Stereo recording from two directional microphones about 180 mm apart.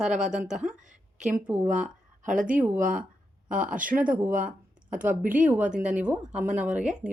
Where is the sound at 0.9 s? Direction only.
45° right (ahead or behind).